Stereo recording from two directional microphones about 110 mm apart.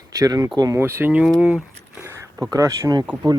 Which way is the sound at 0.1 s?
35° right (ahead or behind).